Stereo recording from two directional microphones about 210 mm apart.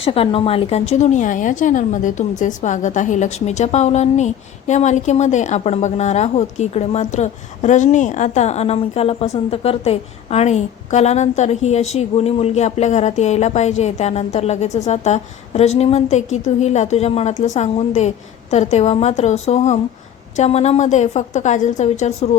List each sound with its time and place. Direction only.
0.0 s a woman's voice: 25° left (ahead or behind)